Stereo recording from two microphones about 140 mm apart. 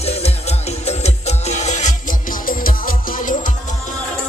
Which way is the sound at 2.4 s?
85° left.